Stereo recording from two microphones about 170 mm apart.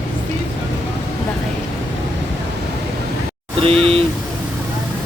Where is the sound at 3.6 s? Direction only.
35° right (ahead or behind).